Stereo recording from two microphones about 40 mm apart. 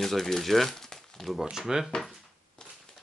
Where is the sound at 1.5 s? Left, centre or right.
Centre.